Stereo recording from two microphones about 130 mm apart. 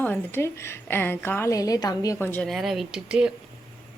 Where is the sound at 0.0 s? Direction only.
15° left (ahead or behind).